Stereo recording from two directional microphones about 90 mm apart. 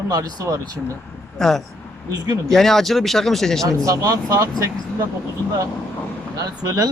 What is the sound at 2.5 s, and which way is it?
Speech, 5° left (ahead or behind).